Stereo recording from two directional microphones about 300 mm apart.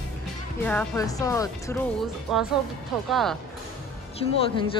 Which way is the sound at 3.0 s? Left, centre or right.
Centre.